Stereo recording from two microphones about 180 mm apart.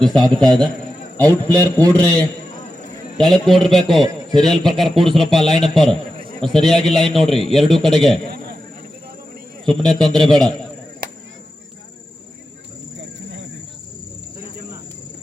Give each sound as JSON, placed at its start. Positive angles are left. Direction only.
{"t": 0.0, "sound": "a man's voice", "side_deg": 0}
{"t": 4.0, "sound": "a man's voice", "side_deg": -25}
{"t": 4.4, "sound": "a man's voice", "side_deg": 0}
{"t": 9.6, "sound": "a man's voice", "side_deg": 5}
{"t": 13.0, "sound": "a sound", "side_deg": -75}